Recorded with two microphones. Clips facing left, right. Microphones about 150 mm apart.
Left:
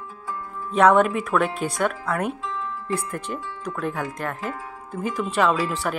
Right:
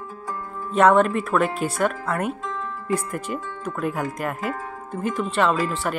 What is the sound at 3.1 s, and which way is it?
Speech, 5° right (ahead or behind).